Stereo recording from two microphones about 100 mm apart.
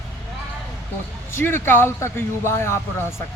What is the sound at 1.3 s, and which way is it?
Speech, 25° left (ahead or behind).